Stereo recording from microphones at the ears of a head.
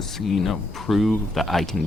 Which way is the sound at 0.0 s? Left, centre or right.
Left.